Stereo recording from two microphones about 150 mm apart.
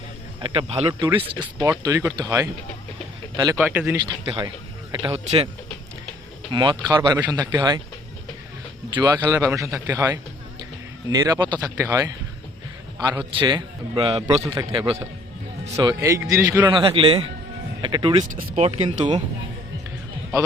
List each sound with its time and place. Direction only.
0.4 s speech: 40° right (ahead or behind); by 2.2 s 20° right (ahead or behind)
3.3 s speech: 25° right (ahead or behind)
3.6 s speech: 10° right (ahead or behind)
4.0 s speech: 30° right (ahead or behind)
6.5 s speech: 30° right (ahead or behind)
8.9 s speech: 25° right (ahead or behind)
13.1 s speech: 30° right (ahead or behind)
14.4 s speech: 20° right (ahead or behind)
14.7 s speech: 35° right (ahead or behind)
15.7 s speech: 25° right (ahead or behind)
18.5 s speech: 45° right (ahead or behind)